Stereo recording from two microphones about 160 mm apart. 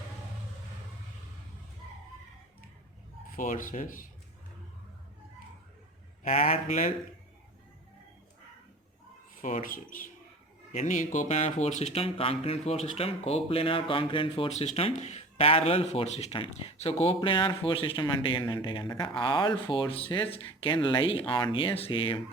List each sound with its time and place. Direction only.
3.3 s speech: 55° left (ahead or behind)
6.2 s speech: 40° left (ahead or behind)
9.4 s speech: 50° left (ahead or behind); by 22.2 s 35° left (ahead or behind)